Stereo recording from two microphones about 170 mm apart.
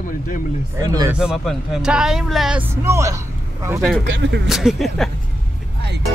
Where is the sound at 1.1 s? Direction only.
5° right (ahead or behind).